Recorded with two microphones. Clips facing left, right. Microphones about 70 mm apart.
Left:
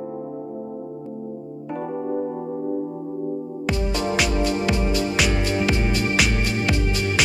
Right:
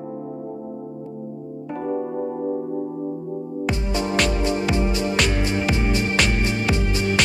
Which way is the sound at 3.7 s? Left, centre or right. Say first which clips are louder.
Left 2 dB; centre.